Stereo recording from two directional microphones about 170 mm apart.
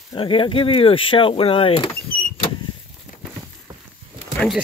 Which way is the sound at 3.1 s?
50° left (ahead or behind).